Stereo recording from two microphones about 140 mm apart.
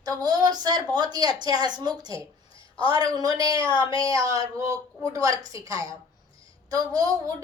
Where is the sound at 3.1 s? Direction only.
25° right (ahead or behind).